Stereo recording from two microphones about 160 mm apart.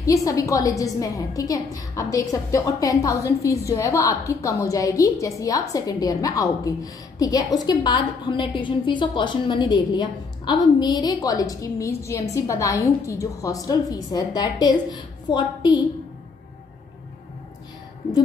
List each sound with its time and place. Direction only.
0.0 s a woman's voice: 20° left (ahead or behind)